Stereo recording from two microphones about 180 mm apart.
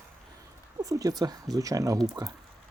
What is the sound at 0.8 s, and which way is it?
Speech, 20° right (ahead or behind).